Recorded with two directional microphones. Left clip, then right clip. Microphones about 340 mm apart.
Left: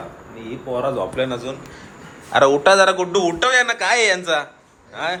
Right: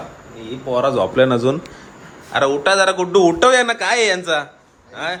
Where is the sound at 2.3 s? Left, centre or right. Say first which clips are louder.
Left 2 dB; centre.